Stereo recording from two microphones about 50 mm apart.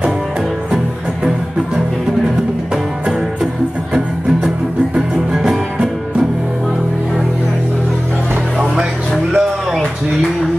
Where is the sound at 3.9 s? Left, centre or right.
Centre.